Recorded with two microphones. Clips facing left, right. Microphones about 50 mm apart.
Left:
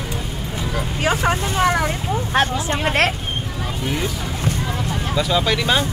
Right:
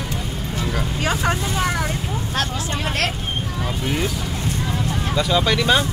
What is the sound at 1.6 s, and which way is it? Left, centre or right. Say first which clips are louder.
Speech: left 4 dB; left.